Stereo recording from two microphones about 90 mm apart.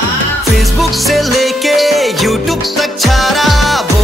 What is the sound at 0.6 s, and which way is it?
Music, centre (ahead or behind).